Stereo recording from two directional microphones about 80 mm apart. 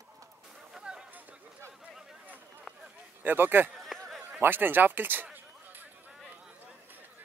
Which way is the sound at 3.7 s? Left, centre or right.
Centre.